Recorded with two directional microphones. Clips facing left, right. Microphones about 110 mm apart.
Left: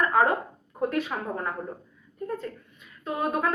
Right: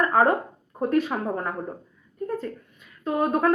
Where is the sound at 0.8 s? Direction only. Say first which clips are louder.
Right 4 dB; 35° right (ahead or behind).